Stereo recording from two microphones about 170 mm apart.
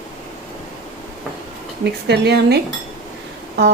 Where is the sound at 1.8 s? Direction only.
80° right.